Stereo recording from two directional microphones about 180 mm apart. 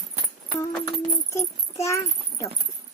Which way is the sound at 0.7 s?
15° left (ahead or behind).